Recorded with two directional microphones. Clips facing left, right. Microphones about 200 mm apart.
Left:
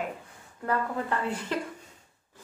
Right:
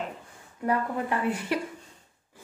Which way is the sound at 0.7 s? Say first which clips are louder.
Right 2 dB; 10° right (ahead or behind).